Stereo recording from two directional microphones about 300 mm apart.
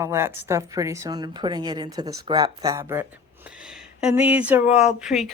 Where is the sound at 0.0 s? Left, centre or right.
Centre.